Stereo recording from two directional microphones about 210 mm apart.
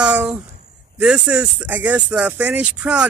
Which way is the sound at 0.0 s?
5° right (ahead or behind).